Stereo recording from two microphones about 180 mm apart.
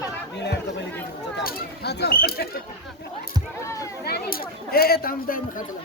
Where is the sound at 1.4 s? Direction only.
65° left (ahead or behind).